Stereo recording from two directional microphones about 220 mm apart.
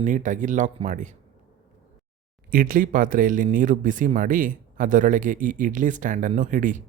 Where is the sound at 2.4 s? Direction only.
40° right (ahead or behind).